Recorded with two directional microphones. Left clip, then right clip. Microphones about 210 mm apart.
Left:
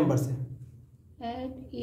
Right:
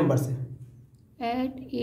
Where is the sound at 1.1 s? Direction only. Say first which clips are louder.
Right 7 dB; 50° right (ahead or behind).